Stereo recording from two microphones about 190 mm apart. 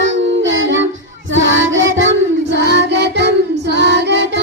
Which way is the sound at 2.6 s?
65° right (ahead or behind).